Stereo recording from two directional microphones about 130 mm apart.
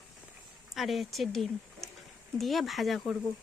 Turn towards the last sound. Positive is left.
turn(degrees=0)  # may be behind; listen again after turning